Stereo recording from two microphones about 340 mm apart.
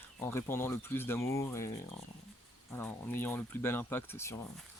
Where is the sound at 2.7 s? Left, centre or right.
Centre.